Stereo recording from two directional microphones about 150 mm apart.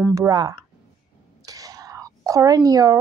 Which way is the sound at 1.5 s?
25° right (ahead or behind).